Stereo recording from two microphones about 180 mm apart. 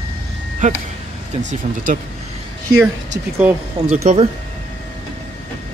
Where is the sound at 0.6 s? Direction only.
45° right (ahead or behind).